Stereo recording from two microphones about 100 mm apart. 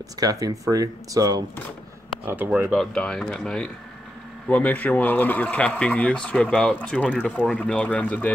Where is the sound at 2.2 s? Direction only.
20° right (ahead or behind).